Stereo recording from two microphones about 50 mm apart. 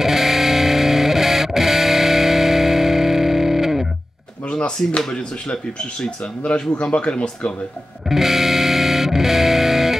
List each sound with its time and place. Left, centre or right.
0.0 s music: centre
4.5 s speech: left
8.1 s music: centre